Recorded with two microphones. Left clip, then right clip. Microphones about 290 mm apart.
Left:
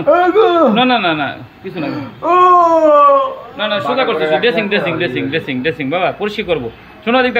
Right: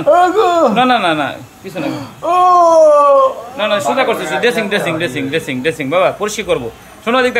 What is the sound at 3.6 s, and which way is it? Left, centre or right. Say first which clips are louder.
Speech: right 1 dB; centre.